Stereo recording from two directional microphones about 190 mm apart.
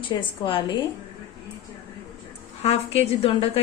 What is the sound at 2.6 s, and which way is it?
A woman's voice, 30° left (ahead or behind).